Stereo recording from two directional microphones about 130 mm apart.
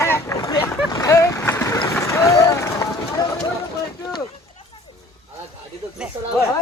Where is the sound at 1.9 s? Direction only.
20° left (ahead or behind).